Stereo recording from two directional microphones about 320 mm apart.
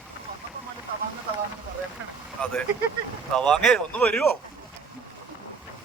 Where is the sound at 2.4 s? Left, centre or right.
Centre.